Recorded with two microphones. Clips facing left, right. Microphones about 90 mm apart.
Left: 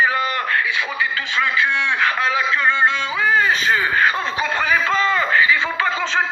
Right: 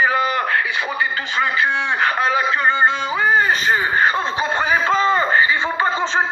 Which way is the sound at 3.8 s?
30° right (ahead or behind).